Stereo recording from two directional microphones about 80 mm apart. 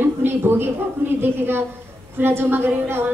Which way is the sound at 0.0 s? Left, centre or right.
Right.